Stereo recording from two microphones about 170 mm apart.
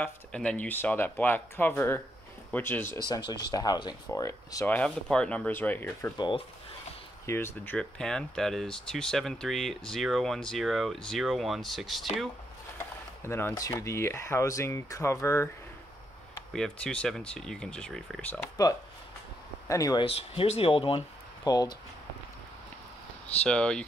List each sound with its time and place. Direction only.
0.0 s speech: 5° left (ahead or behind)
3.3 s speech: 25° left (ahead or behind)
5.1 s speech: 5° left (ahead or behind)
6.1 s speech: 25° left (ahead or behind)
7.2 s speech: 15° left (ahead or behind)
12.7 s speech: 15° left (ahead or behind)
16.5 s speech: 5° left (ahead or behind)
19.7 s speech: 20° left (ahead or behind)
20.1 s speech: 35° left (ahead or behind)
23.4 s speech: 5° left (ahead or behind)